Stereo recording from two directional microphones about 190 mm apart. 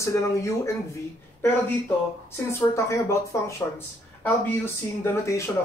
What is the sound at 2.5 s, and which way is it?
Speech, 15° left (ahead or behind).